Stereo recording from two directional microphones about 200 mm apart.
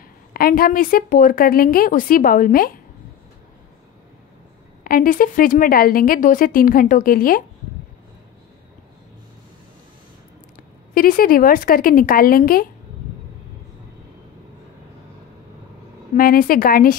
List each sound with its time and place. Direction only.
0.3 s a woman's voice: 45° left (ahead or behind)
4.8 s a woman's voice: 45° left (ahead or behind)
11.0 s a woman's voice: 45° left (ahead or behind)
16.2 s a woman's voice: 45° left (ahead or behind)